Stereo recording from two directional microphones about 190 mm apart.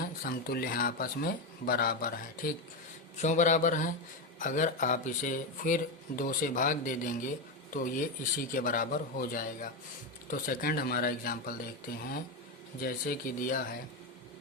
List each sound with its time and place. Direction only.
0.0 s a man's voice: 50° left (ahead or behind)